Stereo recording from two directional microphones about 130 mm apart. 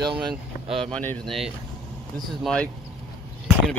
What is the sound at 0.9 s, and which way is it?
Speech, 10° left (ahead or behind).